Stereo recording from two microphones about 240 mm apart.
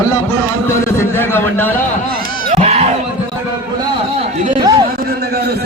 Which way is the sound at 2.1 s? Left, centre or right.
Right.